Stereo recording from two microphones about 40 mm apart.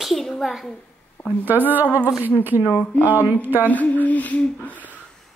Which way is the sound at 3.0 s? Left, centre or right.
Right.